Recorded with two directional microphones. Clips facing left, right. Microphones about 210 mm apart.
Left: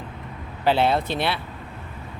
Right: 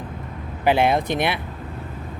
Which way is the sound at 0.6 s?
15° right (ahead or behind).